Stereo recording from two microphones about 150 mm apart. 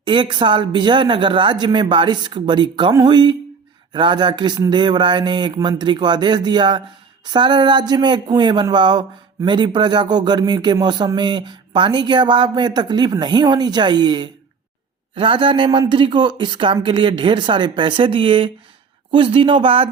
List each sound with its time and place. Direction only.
0.0 s speech: 35° right (ahead or behind)